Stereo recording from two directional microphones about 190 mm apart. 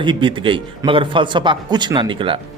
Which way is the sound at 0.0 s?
25° right (ahead or behind).